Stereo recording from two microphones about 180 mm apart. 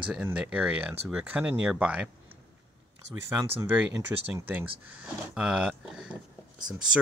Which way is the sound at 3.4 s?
15° right (ahead or behind).